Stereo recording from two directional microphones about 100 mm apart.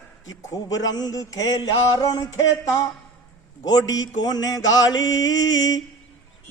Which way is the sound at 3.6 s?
40° left (ahead or behind).